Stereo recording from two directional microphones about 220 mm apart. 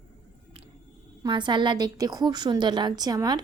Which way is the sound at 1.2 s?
20° right (ahead or behind).